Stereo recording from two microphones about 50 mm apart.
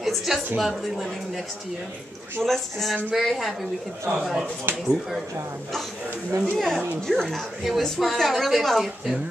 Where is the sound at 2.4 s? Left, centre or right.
Centre.